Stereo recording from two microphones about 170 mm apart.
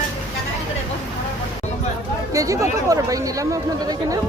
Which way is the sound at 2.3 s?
20° right (ahead or behind).